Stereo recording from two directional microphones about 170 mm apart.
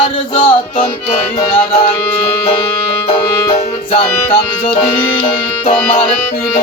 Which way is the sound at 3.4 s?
35° left (ahead or behind).